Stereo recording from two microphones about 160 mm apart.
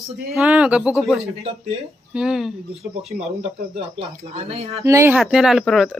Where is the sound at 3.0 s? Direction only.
40° right (ahead or behind).